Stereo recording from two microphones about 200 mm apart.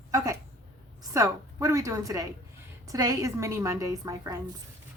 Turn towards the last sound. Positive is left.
turn(degrees=-15)  # may be behind; listen again after turning